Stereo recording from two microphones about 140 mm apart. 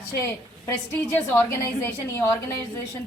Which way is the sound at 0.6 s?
15° left (ahead or behind).